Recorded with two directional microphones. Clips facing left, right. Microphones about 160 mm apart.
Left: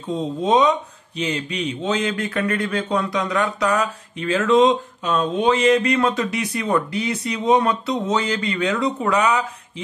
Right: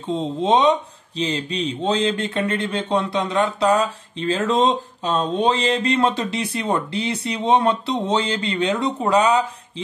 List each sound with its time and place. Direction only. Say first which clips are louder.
0.1 s speech: even; 25° right (ahead or behind)